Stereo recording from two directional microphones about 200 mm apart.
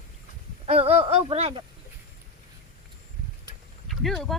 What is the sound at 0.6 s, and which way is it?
Speech, 30° right (ahead or behind).